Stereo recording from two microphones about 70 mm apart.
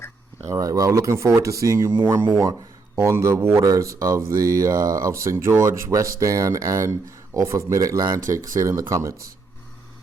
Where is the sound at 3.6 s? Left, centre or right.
Right.